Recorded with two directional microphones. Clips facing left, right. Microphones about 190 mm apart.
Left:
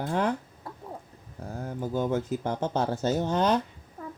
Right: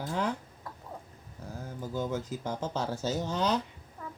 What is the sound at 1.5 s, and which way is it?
Speech, 55° left (ahead or behind).